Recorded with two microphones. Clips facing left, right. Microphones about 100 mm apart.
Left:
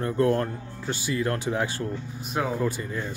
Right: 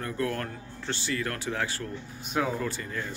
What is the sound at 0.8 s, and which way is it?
Speech, 15° left (ahead or behind).